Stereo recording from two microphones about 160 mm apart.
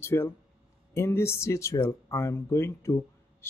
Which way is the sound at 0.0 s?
15° left (ahead or behind).